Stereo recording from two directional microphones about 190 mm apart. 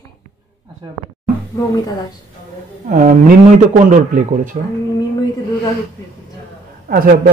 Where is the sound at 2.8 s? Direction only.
45° right (ahead or behind).